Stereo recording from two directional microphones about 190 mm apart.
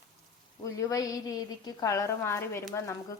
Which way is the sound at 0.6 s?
15° left (ahead or behind).